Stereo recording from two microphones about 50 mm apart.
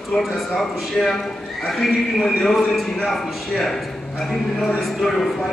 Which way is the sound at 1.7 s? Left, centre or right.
Centre.